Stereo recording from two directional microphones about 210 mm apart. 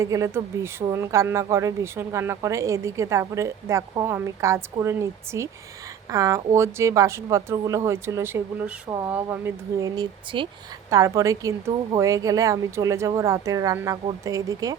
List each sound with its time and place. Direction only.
0.0 s speech: 15° right (ahead or behind)